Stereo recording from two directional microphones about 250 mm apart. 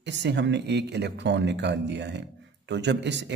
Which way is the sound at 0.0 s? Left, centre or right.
Right.